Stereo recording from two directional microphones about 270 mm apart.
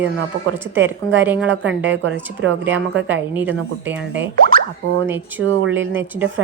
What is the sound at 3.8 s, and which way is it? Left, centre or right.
Speech, centre.